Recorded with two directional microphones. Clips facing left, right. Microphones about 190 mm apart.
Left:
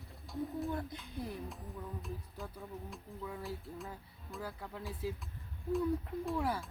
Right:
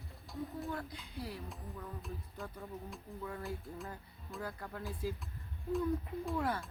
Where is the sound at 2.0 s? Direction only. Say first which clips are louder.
Even; centre (ahead or behind).